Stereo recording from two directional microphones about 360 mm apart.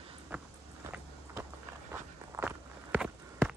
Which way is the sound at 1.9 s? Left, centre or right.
Centre.